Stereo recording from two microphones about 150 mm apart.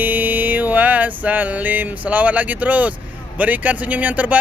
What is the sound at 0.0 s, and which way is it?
Music, 10° right (ahead or behind).